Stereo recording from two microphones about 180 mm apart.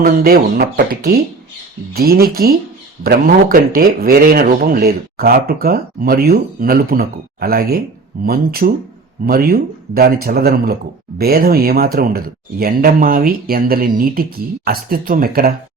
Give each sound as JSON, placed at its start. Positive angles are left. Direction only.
{"t": 0.0, "sound": "a man's voice", "side_deg": -55}